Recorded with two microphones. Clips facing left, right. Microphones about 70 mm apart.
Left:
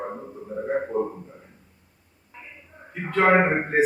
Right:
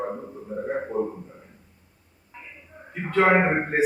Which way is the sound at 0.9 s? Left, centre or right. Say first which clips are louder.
Right 1 dB; left.